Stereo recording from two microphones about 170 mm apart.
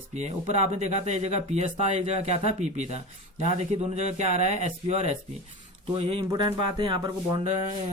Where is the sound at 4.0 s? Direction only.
40° right (ahead or behind).